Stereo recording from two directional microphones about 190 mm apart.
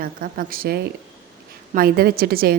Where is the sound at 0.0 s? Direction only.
50° right (ahead or behind).